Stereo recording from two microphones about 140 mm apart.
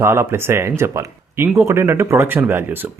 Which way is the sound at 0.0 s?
20° right (ahead or behind).